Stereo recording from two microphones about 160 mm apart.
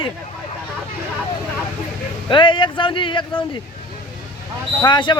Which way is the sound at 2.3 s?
30° left (ahead or behind).